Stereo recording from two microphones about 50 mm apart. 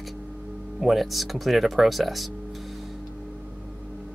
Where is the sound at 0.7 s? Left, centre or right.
Centre.